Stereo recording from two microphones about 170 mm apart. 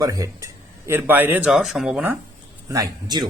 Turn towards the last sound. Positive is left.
turn(degrees=-20)  # may be behind; listen again after turning